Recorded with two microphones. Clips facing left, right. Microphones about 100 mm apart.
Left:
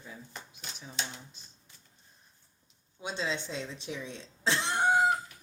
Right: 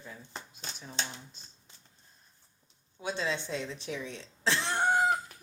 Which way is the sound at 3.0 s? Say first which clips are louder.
Right 1 dB; 20° left (ahead or behind).